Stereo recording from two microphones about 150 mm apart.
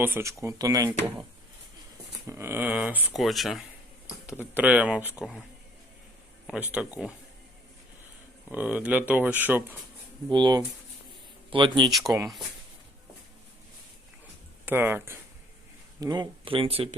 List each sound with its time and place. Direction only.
0.0 s speech: 15° right (ahead or behind)
2.2 s speech: 15° right (ahead or behind)
3.2 s speech: centre (ahead or behind)
6.5 s speech: 10° right (ahead or behind)
8.4 s speech: 10° right (ahead or behind)
10.2 s speech: 30° right (ahead or behind)
11.9 s speech: centre (ahead or behind)
14.6 s speech: 15° right (ahead or behind)
16.0 s speech: 25° right (ahead or behind)